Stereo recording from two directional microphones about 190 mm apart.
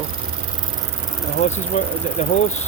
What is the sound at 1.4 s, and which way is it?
Speech, 35° left (ahead or behind).